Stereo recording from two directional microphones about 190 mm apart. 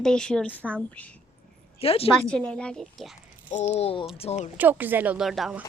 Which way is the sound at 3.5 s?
40° left (ahead or behind).